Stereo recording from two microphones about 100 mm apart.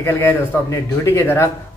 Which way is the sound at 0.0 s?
25° left (ahead or behind).